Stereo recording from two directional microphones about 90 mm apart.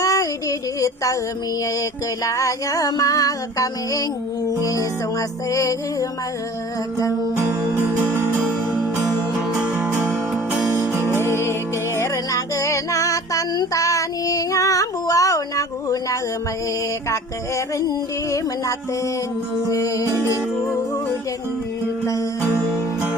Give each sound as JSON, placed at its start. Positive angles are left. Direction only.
{"t": 0.0, "sound": "child singing", "side_deg": 40}
{"t": 1.8, "sound": "a sound", "side_deg": 35}
{"t": 7.9, "sound": "music", "side_deg": -20}
{"t": 10.9, "sound": "music", "side_deg": -25}
{"t": 11.3, "sound": "music", "side_deg": 30}
{"t": 17.7, "sound": "a sound", "side_deg": 35}
{"t": 19.7, "sound": "a sound", "side_deg": 40}
{"t": 20.1, "sound": "music", "side_deg": -40}
{"t": 22.4, "sound": "music", "side_deg": -5}